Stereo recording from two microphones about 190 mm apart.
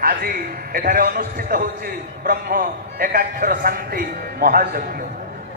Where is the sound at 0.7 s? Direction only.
50° right (ahead or behind).